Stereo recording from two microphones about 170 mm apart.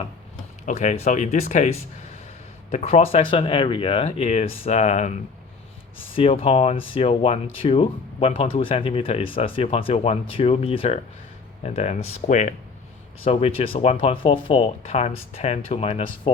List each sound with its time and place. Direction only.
0.6 s speech: 45° left (ahead or behind)
2.7 s speech: 40° left (ahead or behind)
6.1 s speech: 35° left (ahead or behind)
13.2 s speech: 35° left (ahead or behind)